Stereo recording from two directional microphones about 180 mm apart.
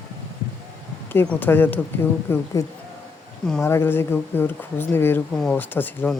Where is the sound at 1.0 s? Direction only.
10° left (ahead or behind).